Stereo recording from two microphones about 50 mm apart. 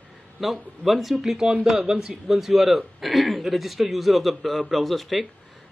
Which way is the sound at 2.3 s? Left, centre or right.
Centre.